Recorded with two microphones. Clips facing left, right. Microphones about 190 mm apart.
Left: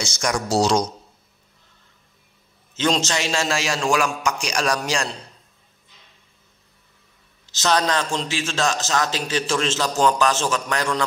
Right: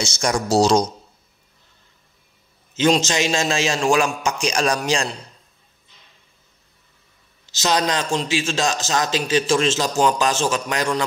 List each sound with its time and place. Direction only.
0.0 s speech: 25° right (ahead or behind)
2.7 s a man's voice: 15° right (ahead or behind)
7.5 s a man's voice: 15° right (ahead or behind)